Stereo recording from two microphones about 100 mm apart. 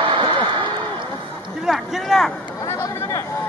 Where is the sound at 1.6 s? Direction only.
Centre (ahead or behind).